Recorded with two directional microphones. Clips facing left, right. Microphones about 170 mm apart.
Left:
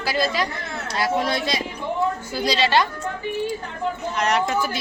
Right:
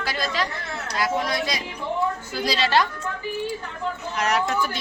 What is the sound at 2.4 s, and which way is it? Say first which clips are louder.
Speech: left 2 dB; centre (ahead or behind).